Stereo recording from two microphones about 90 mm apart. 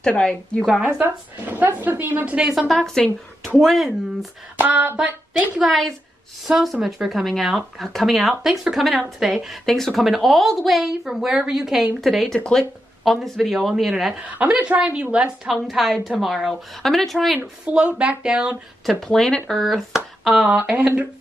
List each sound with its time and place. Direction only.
0.0 s a woman's voice: 10° left (ahead or behind)
1.0 s a woman's voice: 20° right (ahead or behind)
2.7 s a woman's voice: 5° left (ahead or behind)
4.6 s a woman's voice: 20° right (ahead or behind)
5.6 s a woman's voice: 5° left (ahead or behind)
14.1 s a woman's voice: 10° right (ahead or behind)
17.6 s speech: 15° right (ahead or behind)
18.9 s a woman's voice: 5° left (ahead or behind)
20.4 s speech: 15° right (ahead or behind)